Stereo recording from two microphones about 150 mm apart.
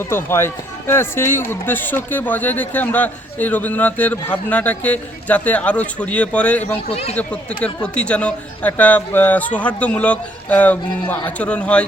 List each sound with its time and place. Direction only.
0.1 s speech: 15° left (ahead or behind)
6.9 s speech: 45° left (ahead or behind)
7.2 s speech: 10° left (ahead or behind)